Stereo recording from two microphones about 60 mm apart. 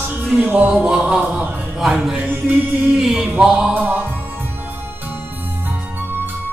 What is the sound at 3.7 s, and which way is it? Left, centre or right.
Music, right.